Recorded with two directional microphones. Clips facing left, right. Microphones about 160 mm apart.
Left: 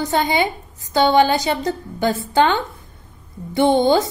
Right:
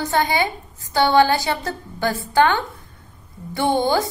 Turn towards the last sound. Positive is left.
turn(degrees=20)  # may be behind; listen again after turning